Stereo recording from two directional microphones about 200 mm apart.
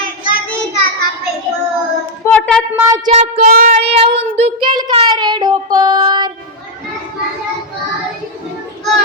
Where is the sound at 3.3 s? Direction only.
45° right (ahead or behind); by 6.3 s 20° right (ahead or behind).